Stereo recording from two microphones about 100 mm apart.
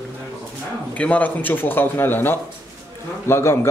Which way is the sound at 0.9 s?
15° left (ahead or behind).